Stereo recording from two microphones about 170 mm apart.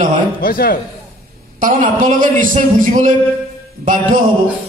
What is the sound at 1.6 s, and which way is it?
A man's voice, 50° right (ahead or behind).